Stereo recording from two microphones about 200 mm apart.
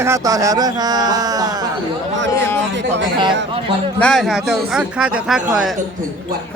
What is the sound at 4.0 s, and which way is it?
Speech, 5° left (ahead or behind).